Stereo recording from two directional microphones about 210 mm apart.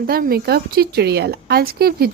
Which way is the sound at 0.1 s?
45° right (ahead or behind).